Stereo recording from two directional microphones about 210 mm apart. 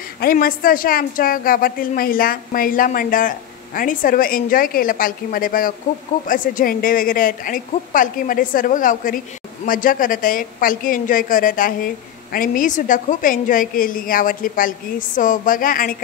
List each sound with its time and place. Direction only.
0.2 s a woman's voice: 45° left (ahead or behind)